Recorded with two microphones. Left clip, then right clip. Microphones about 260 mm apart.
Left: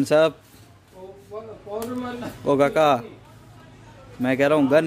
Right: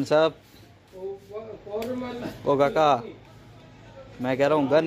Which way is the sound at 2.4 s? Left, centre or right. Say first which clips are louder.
Left 2 dB; left.